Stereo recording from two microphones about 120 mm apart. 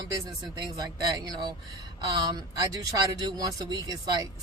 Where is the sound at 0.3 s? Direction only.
35° right (ahead or behind).